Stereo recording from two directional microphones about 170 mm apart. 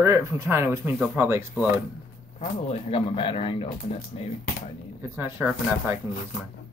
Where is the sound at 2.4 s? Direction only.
35° left (ahead or behind).